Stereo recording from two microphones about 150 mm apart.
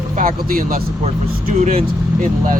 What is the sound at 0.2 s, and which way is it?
Speech, 70° right (ahead or behind).